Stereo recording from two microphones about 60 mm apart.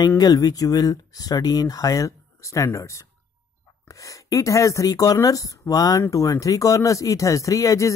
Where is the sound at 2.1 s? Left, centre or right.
Left.